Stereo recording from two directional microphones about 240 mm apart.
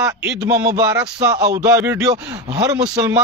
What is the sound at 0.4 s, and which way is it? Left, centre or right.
Speech, centre.